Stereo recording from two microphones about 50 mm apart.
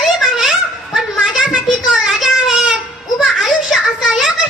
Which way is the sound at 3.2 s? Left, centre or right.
Centre.